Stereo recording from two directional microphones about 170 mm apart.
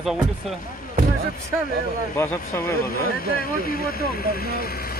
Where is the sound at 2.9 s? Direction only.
60° left (ahead or behind).